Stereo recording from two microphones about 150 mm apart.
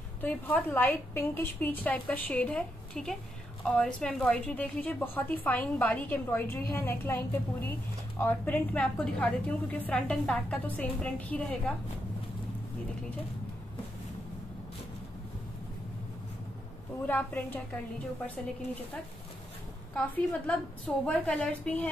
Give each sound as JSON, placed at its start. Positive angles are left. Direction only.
{"t": 0.2, "sound": "a woman's voice", "side_deg": 10}
{"t": 17.0, "sound": "a woman's voice", "side_deg": 10}
{"t": 20.4, "sound": "a woman's voice", "side_deg": 10}